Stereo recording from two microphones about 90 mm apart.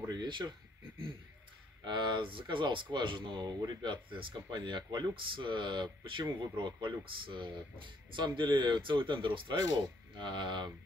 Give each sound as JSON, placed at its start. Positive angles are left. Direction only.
{"t": 0.1, "sound": "speech", "side_deg": -55}
{"t": 1.9, "sound": "speech", "side_deg": -60}